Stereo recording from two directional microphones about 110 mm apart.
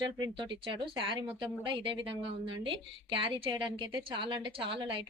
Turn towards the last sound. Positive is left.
turn(degrees=-50)  # may be behind; listen again after turning